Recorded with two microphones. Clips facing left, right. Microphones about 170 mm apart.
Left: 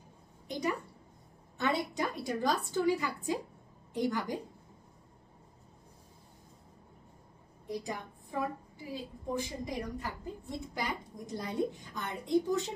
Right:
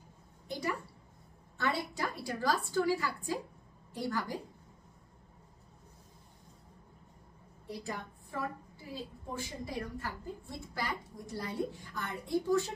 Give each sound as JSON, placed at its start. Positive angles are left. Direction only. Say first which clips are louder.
{"t": 0.5, "sound": "a sound", "louder": "left 3 dB", "side_deg": 20}
{"t": 1.6, "sound": "a woman's voice", "louder": "left 3 dB", "side_deg": 20}
{"t": 7.6, "sound": "a woman's voice", "louder": "left 3 dB", "side_deg": 15}